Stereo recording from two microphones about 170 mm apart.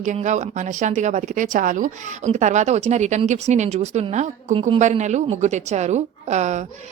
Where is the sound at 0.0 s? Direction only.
45° right (ahead or behind).